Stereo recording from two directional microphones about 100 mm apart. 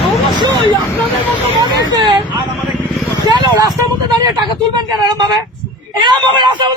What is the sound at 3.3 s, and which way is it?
Speech, 45° right (ahead or behind).